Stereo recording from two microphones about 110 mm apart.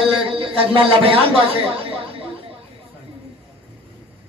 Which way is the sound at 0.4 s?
55° right (ahead or behind).